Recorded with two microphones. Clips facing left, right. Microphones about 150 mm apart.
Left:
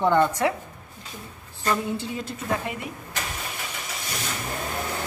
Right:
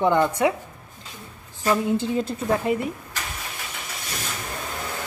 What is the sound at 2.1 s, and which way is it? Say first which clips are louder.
Speech: right 5 dB; 35° right (ahead or behind).